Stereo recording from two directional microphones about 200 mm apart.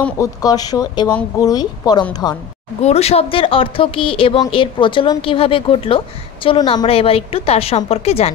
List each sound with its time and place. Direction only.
0.0 s speech: 15° left (ahead or behind)
2.8 s speech: 30° left (ahead or behind)